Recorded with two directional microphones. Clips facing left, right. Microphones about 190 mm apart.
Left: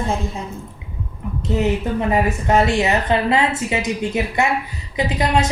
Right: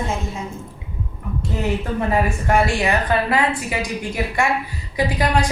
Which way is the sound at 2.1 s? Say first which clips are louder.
Left 1 dB; 20° left (ahead or behind).